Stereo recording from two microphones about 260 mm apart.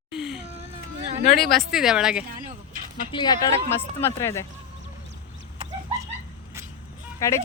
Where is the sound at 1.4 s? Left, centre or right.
Centre.